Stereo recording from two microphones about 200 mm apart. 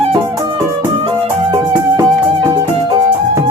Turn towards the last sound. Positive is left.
turn(degrees=-15)  # may be behind; listen again after turning